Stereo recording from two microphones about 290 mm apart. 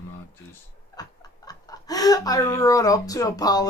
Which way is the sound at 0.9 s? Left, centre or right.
Centre.